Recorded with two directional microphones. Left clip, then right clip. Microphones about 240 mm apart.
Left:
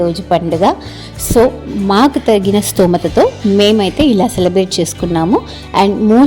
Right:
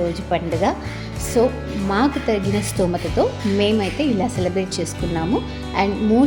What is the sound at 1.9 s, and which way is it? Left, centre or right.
Speech, left.